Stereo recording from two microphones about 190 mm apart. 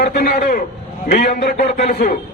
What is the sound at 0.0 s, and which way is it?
A man's voice, 55° left (ahead or behind).